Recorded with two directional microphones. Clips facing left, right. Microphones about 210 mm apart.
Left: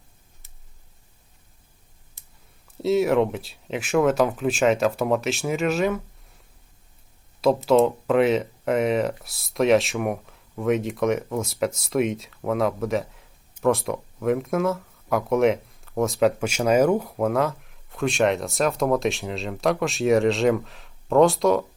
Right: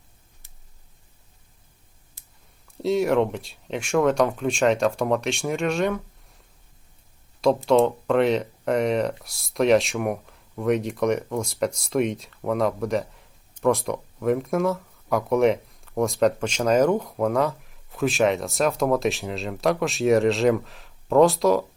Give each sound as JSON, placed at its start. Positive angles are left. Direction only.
{"t": 2.7, "sound": "speech", "side_deg": 0}
{"t": 7.4, "sound": "speech", "side_deg": 0}